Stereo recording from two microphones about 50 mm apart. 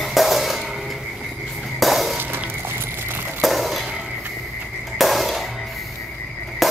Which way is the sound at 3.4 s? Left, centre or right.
Centre.